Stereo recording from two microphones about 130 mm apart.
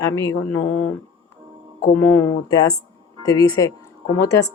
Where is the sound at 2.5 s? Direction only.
30° left (ahead or behind).